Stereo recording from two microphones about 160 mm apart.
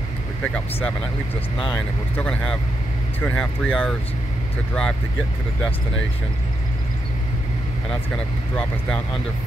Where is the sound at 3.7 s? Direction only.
5° right (ahead or behind).